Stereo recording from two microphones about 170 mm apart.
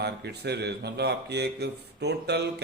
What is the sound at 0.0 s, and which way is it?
A man's voice, 75° right (ahead or behind).